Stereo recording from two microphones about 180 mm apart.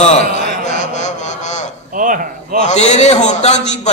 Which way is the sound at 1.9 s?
50° right (ahead or behind).